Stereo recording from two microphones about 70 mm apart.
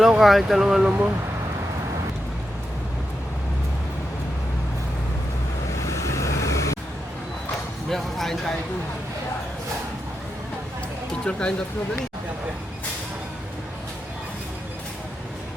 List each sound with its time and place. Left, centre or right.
0.2 s speech: centre
0.9 s speech: right
5.8 s vehicle: left
7.9 s speech: centre
11.1 s music: centre